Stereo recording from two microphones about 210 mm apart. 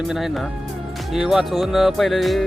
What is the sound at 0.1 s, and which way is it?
Music, centre (ahead or behind).